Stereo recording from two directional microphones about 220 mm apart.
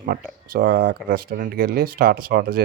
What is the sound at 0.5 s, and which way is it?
Speech, 45° right (ahead or behind).